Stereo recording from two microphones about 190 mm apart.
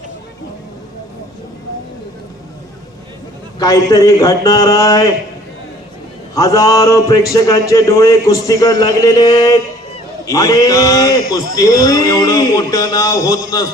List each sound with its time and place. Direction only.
3.6 s a man's voice: 20° left (ahead or behind)
6.3 s a man's voice: 15° left (ahead or behind)